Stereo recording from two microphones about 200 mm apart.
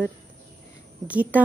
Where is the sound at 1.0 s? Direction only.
5° right (ahead or behind).